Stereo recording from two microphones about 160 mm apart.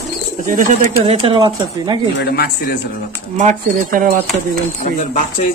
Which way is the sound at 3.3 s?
55° right (ahead or behind).